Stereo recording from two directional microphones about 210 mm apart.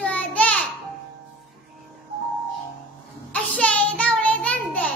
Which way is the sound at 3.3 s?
5° left (ahead or behind).